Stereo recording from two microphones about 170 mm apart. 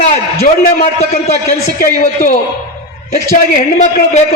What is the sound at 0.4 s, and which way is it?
A man's voice, 40° left (ahead or behind).